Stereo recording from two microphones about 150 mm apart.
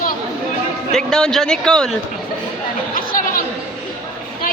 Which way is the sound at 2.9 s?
70° left (ahead or behind).